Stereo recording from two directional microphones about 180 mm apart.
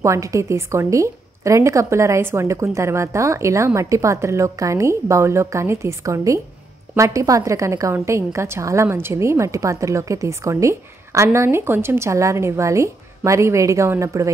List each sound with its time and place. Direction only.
0.0 s a woman's voice: 15° right (ahead or behind)